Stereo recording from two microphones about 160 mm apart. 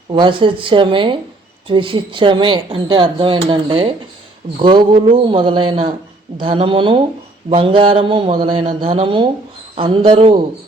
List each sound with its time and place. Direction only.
0.1 s speech: 30° right (ahead or behind)